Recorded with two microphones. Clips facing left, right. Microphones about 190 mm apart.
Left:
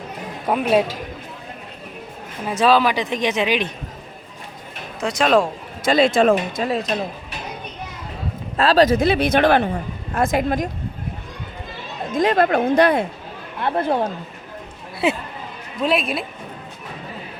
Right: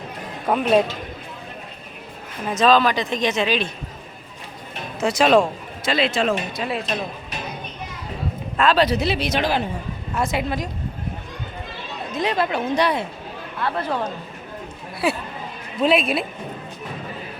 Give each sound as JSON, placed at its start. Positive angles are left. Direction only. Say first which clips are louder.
{"t": 0.4, "sound": "a woman's voice", "louder": "even", "side_deg": 5}
{"t": 2.4, "sound": "a woman's voice", "louder": "even", "side_deg": 10}
{"t": 4.9, "sound": "speech", "louder": "right 1 dB", "side_deg": -5}
{"t": 5.8, "sound": "speech", "louder": "left 6 dB", "side_deg": 50}
{"t": 8.5, "sound": "speech", "louder": "left 3 dB", "side_deg": 35}
{"t": 12.1, "sound": "speech", "louder": "left 6 dB", "side_deg": 50}
{"t": 15.0, "sound": "speech", "louder": "left 2 dB", "side_deg": 20}
{"t": 15.8, "sound": "speech", "louder": "right 2 dB", "side_deg": 0}